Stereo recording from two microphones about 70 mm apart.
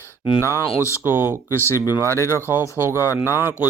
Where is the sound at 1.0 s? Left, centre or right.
Right.